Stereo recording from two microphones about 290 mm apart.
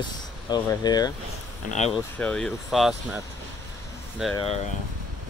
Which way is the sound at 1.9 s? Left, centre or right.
Centre.